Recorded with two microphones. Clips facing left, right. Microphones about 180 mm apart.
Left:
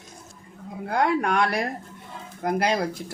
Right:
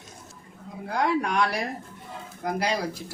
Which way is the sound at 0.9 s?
55° left (ahead or behind).